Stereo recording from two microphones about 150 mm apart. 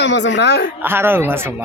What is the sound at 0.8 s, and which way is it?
Speech, 15° right (ahead or behind).